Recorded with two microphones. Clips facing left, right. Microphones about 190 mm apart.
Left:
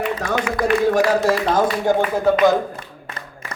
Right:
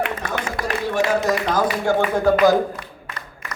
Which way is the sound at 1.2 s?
25° left (ahead or behind).